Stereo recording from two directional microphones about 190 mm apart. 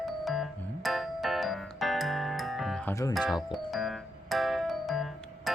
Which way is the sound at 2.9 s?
15° left (ahead or behind).